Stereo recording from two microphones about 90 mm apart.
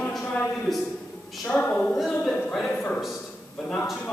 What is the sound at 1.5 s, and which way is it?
A man's voice, 15° left (ahead or behind).